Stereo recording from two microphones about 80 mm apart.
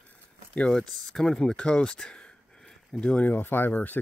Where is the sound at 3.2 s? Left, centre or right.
Left.